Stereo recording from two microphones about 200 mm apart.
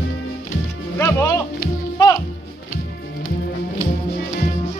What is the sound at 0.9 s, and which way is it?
Music, 15° left (ahead or behind).